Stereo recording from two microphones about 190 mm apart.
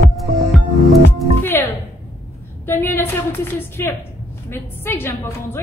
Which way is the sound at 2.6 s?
10° left (ahead or behind).